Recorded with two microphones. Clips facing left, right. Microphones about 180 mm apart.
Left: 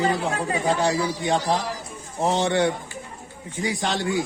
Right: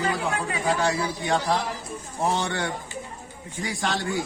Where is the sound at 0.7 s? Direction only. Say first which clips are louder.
Left 1 dB; 20° left (ahead or behind).